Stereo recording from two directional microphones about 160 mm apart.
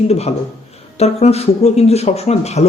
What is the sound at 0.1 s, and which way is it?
Speech, 40° left (ahead or behind).